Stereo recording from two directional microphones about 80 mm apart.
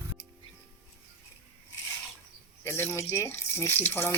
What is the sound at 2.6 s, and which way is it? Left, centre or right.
Drip, left.